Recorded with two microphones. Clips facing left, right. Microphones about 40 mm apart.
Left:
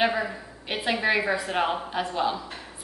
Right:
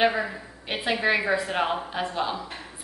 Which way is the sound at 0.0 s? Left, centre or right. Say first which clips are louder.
Right 1 dB; centre.